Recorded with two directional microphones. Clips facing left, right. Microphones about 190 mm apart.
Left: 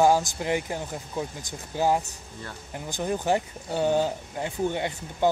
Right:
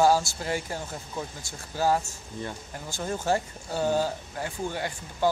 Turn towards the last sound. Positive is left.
turn(degrees=20)  # may be behind; listen again after turning